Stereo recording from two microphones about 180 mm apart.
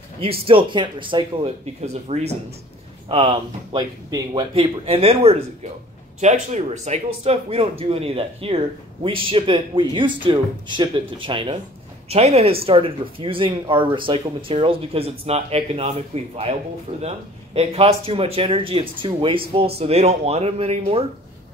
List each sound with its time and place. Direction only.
0.2 s speech: 30° right (ahead or behind)
17.6 s speech: 35° right (ahead or behind)